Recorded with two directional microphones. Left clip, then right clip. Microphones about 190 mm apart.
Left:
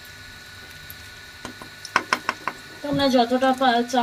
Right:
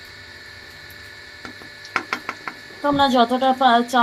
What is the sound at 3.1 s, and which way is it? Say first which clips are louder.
Speech: right 2 dB; 25° right (ahead or behind).